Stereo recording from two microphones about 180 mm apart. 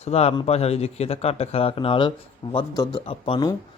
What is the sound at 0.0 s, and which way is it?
Speech, 35° left (ahead or behind).